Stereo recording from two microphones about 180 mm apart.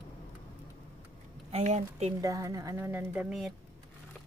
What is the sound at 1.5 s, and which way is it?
Speech, 40° right (ahead or behind).